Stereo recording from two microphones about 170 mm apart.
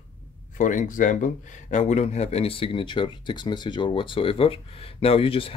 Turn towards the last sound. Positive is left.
turn(degrees=30)  # may be behind; listen again after turning